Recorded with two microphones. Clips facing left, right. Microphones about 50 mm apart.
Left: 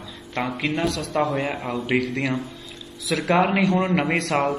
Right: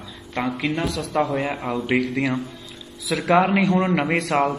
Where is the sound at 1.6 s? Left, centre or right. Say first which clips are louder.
Right 2 dB; right.